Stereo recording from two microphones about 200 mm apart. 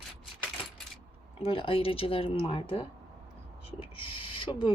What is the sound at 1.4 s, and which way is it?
Speech, 25° left (ahead or behind).